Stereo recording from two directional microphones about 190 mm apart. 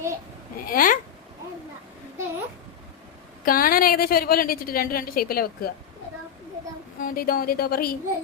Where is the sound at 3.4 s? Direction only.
50° left (ahead or behind).